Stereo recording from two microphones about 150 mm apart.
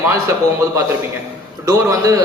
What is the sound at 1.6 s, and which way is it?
Speech, 20° right (ahead or behind).